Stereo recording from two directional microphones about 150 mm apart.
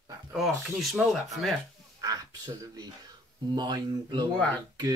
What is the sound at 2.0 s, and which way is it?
Speech, 25° right (ahead or behind).